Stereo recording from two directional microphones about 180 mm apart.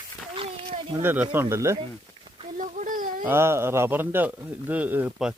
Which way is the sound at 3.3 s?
15° right (ahead or behind).